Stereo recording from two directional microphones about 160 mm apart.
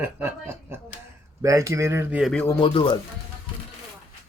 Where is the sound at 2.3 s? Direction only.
15° left (ahead or behind).